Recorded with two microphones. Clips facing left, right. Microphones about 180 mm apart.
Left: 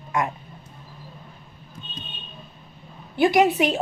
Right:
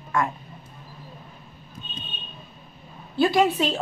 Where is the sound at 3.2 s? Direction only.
15° left (ahead or behind).